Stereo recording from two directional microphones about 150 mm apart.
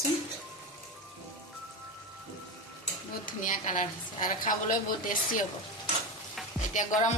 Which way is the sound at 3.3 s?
60° left (ahead or behind).